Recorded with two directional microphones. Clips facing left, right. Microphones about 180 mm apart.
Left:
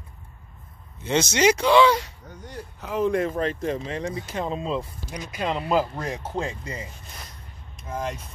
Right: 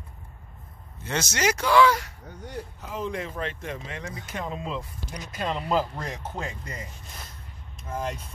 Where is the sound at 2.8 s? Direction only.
60° left (ahead or behind); by 4.9 s 30° left (ahead or behind).